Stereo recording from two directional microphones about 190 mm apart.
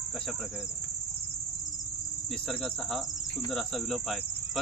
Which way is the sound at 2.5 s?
Centre (ahead or behind).